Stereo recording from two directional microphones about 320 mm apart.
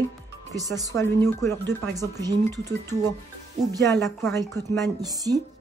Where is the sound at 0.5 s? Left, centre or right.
Centre.